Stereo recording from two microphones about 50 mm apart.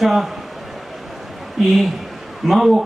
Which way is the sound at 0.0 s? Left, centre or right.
Centre.